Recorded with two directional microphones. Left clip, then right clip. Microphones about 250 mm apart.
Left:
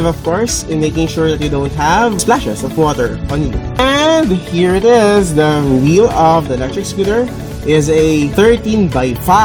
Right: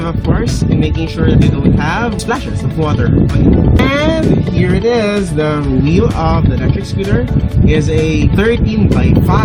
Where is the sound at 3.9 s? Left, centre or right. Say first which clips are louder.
Left 5 dB; right.